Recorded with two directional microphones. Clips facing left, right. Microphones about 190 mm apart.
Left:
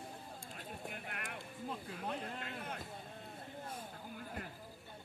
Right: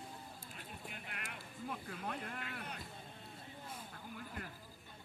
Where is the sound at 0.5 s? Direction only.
50° left (ahead or behind).